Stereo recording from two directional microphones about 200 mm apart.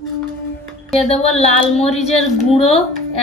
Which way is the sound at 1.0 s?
30° left (ahead or behind).